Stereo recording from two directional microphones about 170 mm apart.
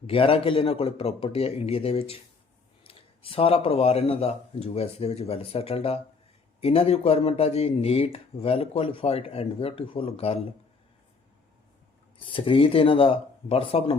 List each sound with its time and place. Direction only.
0.1 s speech: 35° left (ahead or behind)
12.2 s speech: 30° left (ahead or behind)